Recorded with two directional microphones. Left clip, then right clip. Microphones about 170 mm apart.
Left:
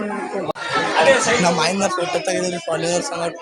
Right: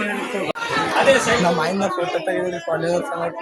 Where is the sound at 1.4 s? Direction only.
20° left (ahead or behind).